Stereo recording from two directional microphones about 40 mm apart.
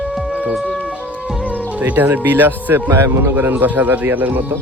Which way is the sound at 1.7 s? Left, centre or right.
Right.